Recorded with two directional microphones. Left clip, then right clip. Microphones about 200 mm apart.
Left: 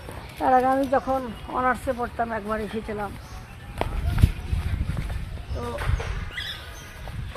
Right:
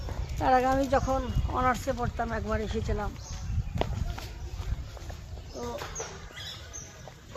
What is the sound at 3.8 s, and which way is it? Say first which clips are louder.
Walk: left 3 dB; 10° left (ahead or behind).